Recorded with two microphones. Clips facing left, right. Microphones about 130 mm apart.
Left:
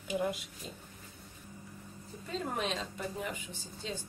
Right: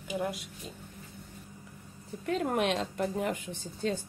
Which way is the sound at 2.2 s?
70° right (ahead or behind).